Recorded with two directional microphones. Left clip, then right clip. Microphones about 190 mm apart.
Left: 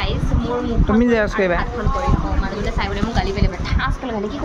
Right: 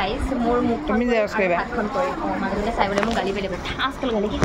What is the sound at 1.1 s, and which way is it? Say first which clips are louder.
Speech: even; 40° left (ahead or behind).